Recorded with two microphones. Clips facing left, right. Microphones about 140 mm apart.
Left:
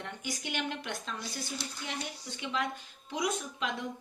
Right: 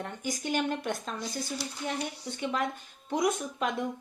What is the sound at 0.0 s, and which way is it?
Speech, 45° right (ahead or behind).